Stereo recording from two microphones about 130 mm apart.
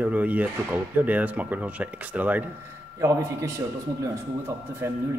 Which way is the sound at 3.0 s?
25° right (ahead or behind).